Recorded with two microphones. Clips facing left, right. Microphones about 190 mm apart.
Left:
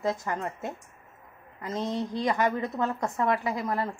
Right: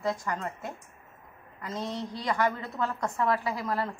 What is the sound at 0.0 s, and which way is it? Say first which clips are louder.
A woman's voice: left 2 dB; 20° left (ahead or behind).